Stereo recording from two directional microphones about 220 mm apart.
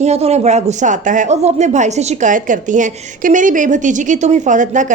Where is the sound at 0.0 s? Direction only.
30° right (ahead or behind).